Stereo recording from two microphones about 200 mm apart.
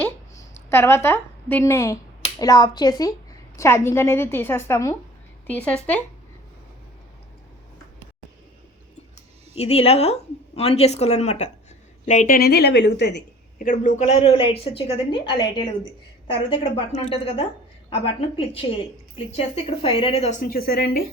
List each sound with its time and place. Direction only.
0.7 s a woman's voice: 10° left (ahead or behind)
9.6 s a woman's voice: 30° left (ahead or behind); by 13.7 s 55° left (ahead or behind)
13.7 s a woman's voice: 35° left (ahead or behind)